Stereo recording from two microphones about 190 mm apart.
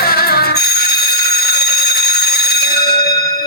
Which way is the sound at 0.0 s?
55° left (ahead or behind).